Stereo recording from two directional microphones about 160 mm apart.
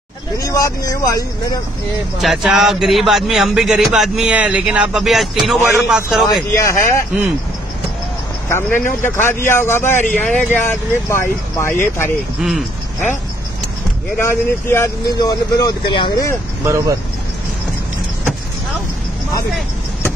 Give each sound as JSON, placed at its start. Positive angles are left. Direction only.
{"t": 0.4, "sound": "speech", "side_deg": 20}
{"t": 2.1, "sound": "a man's voice", "side_deg": 0}
{"t": 6.5, "sound": "speech", "side_deg": 15}
{"t": 8.5, "sound": "speech", "side_deg": 15}
{"t": 12.4, "sound": "a man's voice", "side_deg": 0}
{"t": 14.2, "sound": "speech", "side_deg": 15}
{"t": 16.6, "sound": "speech", "side_deg": -20}